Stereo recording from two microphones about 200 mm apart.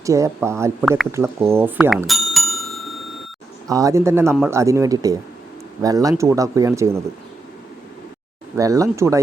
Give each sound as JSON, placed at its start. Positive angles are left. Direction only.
{"t": 0.0, "sound": "speech", "side_deg": -15}
{"t": 1.1, "sound": "bicycle bell", "side_deg": -15}
{"t": 3.7, "sound": "speech", "side_deg": -15}
{"t": 8.5, "sound": "speech", "side_deg": -15}